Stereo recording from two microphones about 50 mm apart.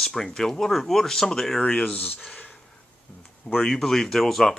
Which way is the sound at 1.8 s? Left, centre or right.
Left.